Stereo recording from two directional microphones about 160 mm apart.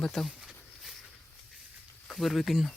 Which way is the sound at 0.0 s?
5° left (ahead or behind).